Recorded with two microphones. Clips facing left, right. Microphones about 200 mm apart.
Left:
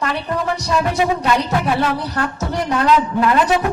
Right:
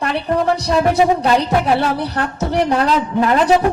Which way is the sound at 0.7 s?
35° right (ahead or behind).